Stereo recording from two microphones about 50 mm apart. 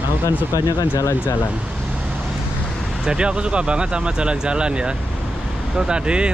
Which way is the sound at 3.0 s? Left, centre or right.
Centre.